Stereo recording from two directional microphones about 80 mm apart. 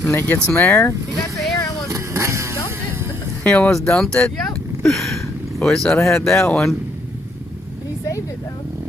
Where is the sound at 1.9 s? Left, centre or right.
Right.